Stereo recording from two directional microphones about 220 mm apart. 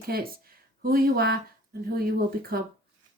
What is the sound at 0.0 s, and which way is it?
Speech, 45° right (ahead or behind).